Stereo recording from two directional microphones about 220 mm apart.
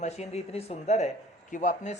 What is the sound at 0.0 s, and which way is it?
Speech, 30° left (ahead or behind).